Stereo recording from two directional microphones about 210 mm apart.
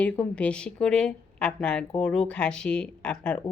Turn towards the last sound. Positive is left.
turn(degrees=5)  # may be behind; listen again after turning